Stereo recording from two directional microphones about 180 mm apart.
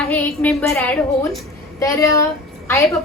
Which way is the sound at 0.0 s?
10° left (ahead or behind).